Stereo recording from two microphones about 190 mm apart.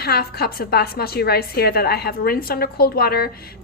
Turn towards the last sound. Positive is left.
turn(degrees=55)  # may be behind; listen again after turning